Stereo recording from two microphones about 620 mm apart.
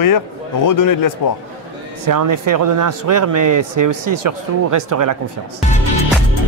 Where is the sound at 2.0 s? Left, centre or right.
Right.